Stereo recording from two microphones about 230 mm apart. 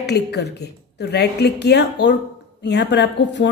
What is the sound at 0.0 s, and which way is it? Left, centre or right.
A woman's voice, left.